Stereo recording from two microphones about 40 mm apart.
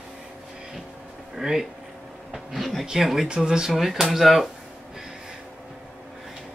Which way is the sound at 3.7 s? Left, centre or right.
Centre.